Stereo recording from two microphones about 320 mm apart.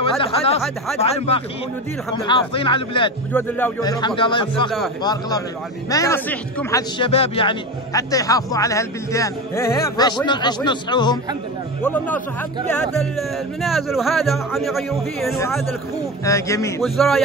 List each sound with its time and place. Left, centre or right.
0.0 s a man's voice: centre
13.6 s a man's voice: centre